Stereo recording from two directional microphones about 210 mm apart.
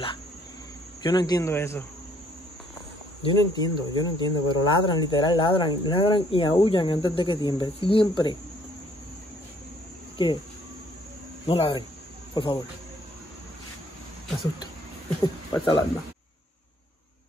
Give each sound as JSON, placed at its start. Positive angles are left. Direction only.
{"t": 1.0, "sound": "speech", "side_deg": 20}
{"t": 3.2, "sound": "speech", "side_deg": 20}
{"t": 10.1, "sound": "speech", "side_deg": 20}
{"t": 11.4, "sound": "speech", "side_deg": 25}
{"t": 15.2, "sound": "speech", "side_deg": 20}